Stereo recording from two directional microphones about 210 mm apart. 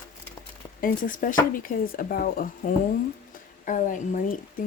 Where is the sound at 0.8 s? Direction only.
40° left (ahead or behind).